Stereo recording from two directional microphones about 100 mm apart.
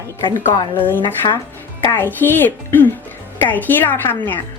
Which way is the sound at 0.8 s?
20° left (ahead or behind).